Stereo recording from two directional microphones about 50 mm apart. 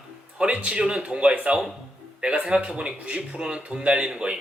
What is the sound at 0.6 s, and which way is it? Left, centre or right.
Speech, right.